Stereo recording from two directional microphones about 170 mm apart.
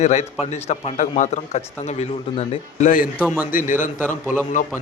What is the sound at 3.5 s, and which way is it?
Speech, 50° left (ahead or behind).